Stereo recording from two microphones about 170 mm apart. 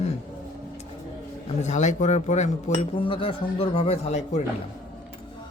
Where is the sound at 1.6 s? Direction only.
45° left (ahead or behind).